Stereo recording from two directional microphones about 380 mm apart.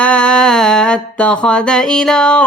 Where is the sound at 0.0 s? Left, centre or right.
Centre.